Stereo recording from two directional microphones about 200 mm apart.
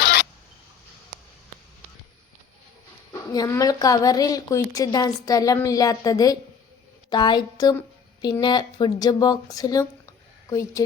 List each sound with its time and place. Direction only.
3.1 s a woman's voice: 15° left (ahead or behind)